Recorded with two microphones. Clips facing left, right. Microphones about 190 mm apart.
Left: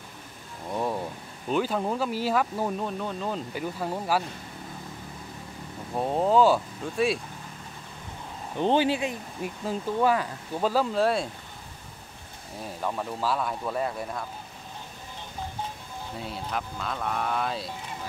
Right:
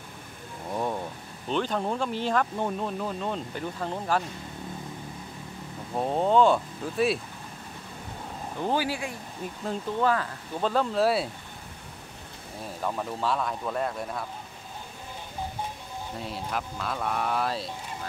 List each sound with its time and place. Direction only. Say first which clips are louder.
0.7 s a sound: left 1 dB; centre (ahead or behind)
1.5 s speech: left 1 dB; 5° left (ahead or behind)
5.9 s speech: even; centre (ahead or behind)
8.5 s speech: left 5 dB; 25° left (ahead or behind)
9.4 s speech: left 1 dB; 10° left (ahead or behind)
12.8 s speech: even; centre (ahead or behind)
16.2 s speech: even; centre (ahead or behind)